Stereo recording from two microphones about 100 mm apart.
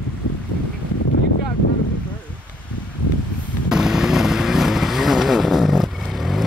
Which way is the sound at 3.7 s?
5° right (ahead or behind).